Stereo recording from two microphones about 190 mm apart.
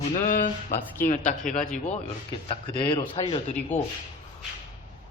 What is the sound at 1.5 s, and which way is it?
Speech, 40° left (ahead or behind).